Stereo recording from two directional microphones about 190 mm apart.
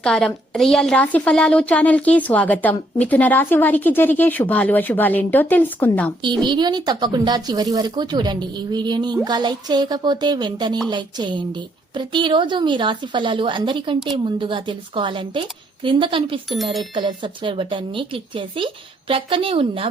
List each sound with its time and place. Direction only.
0.0 s a woman's voice: 5° left (ahead or behind)
6.2 s a woman's voice: 25° right (ahead or behind)